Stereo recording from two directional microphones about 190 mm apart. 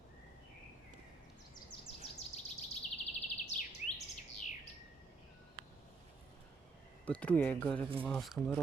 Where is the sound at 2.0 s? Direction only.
35° left (ahead or behind).